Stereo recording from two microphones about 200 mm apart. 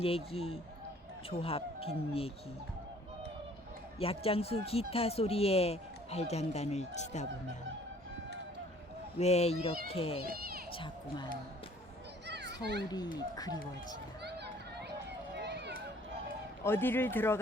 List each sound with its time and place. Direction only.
0.0 s speech: 30° left (ahead or behind)
4.0 s speech: 30° left (ahead or behind)
9.1 s speech: 30° left (ahead or behind)
10.3 s a sound: 50° right (ahead or behind)
12.8 s speech: 20° left (ahead or behind)
14.3 s a sound: 55° right (ahead or behind)
15.4 s run: 60° right (ahead or behind)
16.6 s speech: 10° left (ahead or behind)